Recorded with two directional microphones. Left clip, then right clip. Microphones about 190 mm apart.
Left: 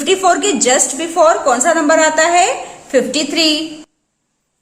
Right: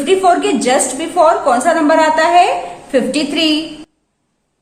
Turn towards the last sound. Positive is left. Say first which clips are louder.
# even
turn(degrees=30)  # may be behind; listen again after turning